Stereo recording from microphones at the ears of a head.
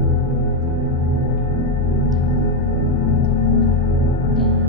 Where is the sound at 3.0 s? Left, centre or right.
Left.